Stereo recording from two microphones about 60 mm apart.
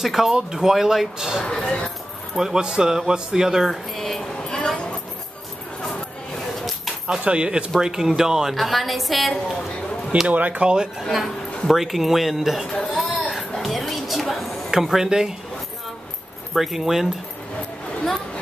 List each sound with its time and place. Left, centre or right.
0.0 s speech: centre
1.4 s speech: centre
2.3 s speech: centre
3.7 s a sound: centre
7.1 s a woman's voice: centre
10.2 s speech: right
11.0 s a woman's voice: centre
12.7 s a sound: centre
13.0 s a sound: centre
16.5 s a woman's voice: centre